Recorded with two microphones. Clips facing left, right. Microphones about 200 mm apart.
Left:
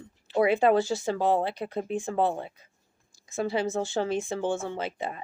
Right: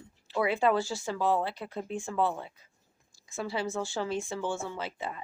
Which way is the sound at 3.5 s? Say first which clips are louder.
Left 4 dB; 20° left (ahead or behind).